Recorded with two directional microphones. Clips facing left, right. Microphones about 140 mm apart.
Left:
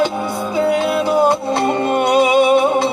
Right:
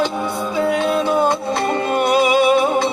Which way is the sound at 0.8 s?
5° left (ahead or behind).